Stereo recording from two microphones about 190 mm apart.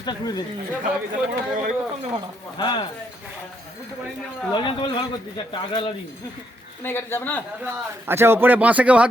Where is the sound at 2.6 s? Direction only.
20° left (ahead or behind).